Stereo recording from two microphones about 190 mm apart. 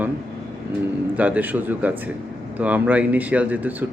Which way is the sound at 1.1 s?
10° right (ahead or behind).